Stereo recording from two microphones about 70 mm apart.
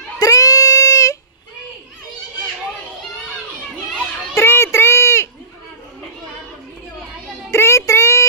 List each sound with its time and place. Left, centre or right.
0.2 s child singing: left
4.4 s a sound: left
7.5 s child singing: left